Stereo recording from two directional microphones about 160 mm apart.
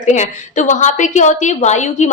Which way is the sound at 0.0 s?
50° left (ahead or behind).